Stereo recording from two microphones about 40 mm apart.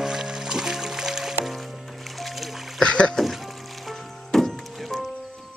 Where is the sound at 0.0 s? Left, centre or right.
Centre.